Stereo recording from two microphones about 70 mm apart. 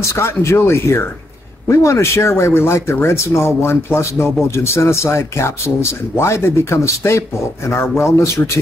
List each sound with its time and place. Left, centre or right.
0.0 s speech: left